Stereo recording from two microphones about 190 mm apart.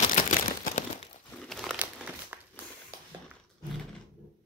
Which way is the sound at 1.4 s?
Centre (ahead or behind).